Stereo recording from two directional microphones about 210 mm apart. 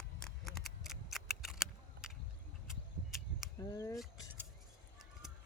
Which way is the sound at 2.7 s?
Centre (ahead or behind).